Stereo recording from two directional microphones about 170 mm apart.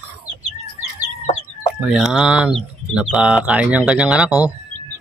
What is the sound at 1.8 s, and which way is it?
Speech, 5° right (ahead or behind).